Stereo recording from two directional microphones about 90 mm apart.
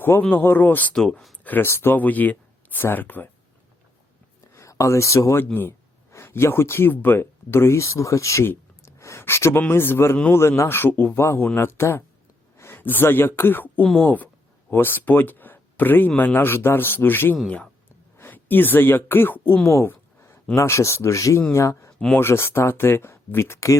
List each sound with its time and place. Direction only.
0.0 s speech: 20° left (ahead or behind)
0.9 s speech: 5° left (ahead or behind)
1.5 s speech: 25° left (ahead or behind)
4.5 s speech: 35° left (ahead or behind)
13.8 s speech: centre (ahead or behind)
14.7 s speech: 25° left (ahead or behind)
19.6 s a sound: 30° left (ahead or behind)
20.6 s speech: 30° left (ahead or behind)